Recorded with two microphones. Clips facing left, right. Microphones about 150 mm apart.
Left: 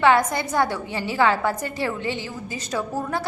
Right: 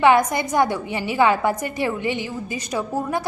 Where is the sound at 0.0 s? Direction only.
15° right (ahead or behind).